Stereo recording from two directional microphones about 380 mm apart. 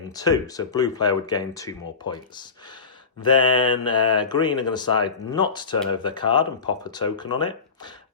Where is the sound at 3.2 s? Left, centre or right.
Centre.